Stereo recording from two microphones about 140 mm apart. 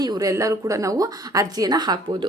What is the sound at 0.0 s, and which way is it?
A woman's voice, 25° right (ahead or behind).